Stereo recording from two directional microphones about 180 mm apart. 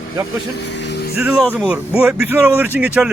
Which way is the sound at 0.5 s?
70° left (ahead or behind).